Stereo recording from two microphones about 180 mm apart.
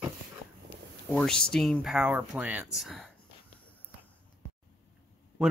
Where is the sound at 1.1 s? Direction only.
5° left (ahead or behind).